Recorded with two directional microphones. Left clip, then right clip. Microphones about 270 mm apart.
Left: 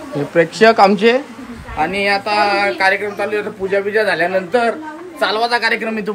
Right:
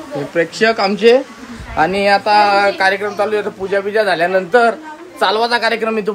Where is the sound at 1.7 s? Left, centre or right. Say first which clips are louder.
Right 3 dB; right.